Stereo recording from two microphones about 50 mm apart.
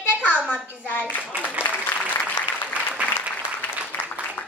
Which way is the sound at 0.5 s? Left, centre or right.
Left.